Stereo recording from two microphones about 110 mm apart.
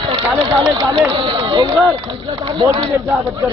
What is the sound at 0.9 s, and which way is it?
Speech, 50° right (ahead or behind).